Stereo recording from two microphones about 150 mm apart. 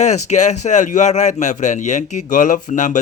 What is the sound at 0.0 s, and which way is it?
A man's voice, 50° left (ahead or behind).